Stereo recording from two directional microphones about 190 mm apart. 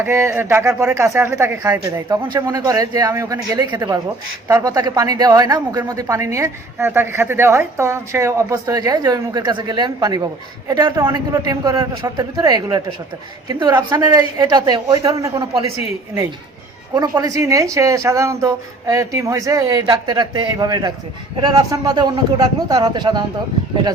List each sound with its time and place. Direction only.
0.0 s a woman's voice: 15° right (ahead or behind)
16.9 s a woman's voice: 20° right (ahead or behind)